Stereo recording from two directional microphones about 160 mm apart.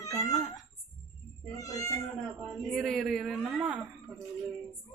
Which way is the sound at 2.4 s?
Centre (ahead or behind).